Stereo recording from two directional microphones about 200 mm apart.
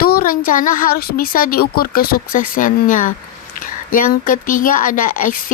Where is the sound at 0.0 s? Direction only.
45° left (ahead or behind).